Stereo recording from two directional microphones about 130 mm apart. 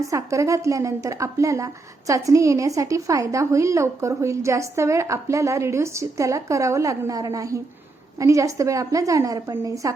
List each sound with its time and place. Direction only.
0.0 s a woman's voice: 25° right (ahead or behind)